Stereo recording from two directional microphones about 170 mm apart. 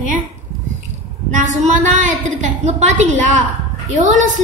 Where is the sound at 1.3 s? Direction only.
45° right (ahead or behind).